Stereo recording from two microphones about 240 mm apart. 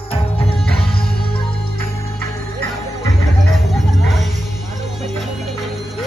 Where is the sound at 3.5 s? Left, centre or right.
Centre.